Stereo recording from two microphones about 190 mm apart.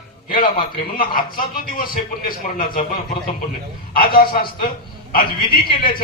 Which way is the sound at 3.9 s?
50° left (ahead or behind).